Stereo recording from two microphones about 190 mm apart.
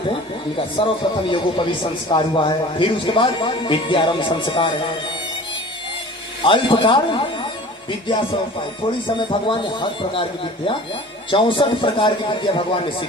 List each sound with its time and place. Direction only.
0.8 s speech: 25° left (ahead or behind)
6.4 s speech: 25° left (ahead or behind)
9.0 s speech: 25° left (ahead or behind)
11.3 s speech: 25° left (ahead or behind)